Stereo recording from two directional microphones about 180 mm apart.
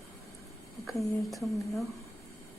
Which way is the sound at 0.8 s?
Centre (ahead or behind).